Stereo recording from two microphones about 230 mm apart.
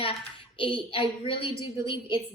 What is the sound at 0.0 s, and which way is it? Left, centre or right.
A woman's voice, left.